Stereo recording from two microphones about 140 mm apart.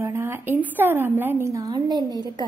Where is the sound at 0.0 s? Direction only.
20° right (ahead or behind).